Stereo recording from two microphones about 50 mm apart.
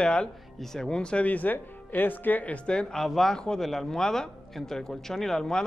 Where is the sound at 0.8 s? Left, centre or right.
Centre.